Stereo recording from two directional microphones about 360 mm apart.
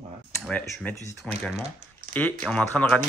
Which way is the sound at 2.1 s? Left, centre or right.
Right.